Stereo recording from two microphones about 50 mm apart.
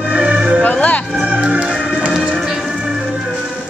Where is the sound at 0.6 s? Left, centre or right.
Left.